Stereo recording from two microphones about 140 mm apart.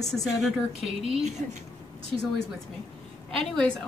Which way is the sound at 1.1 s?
55° right (ahead or behind).